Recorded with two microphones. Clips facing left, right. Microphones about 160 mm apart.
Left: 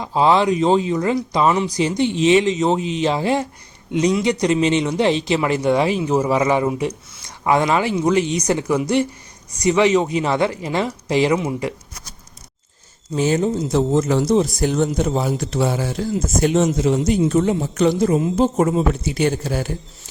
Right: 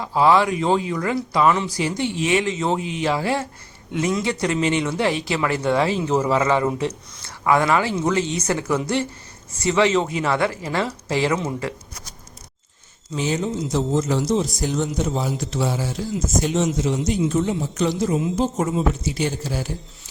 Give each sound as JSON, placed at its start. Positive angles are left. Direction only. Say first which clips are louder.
{"t": 0.0, "sound": "speech", "louder": "left 1 dB", "side_deg": 20}
{"t": 13.1, "sound": "a man's voice", "louder": "left 5 dB", "side_deg": 45}